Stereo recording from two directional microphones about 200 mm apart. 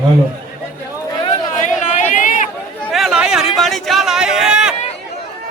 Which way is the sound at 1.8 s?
40° left (ahead or behind).